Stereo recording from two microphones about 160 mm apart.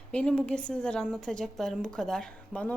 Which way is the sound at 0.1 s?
5° left (ahead or behind).